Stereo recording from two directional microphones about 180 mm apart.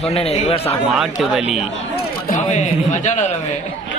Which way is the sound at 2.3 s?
40° left (ahead or behind).